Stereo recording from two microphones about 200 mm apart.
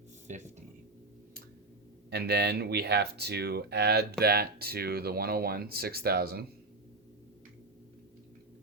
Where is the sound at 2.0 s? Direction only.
55° right (ahead or behind).